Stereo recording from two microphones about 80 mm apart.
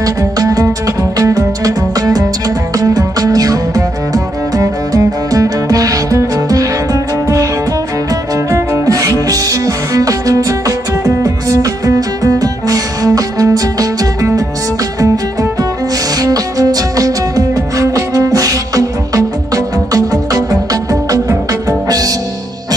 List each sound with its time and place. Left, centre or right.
0.0 s music: right
16.2 s music: right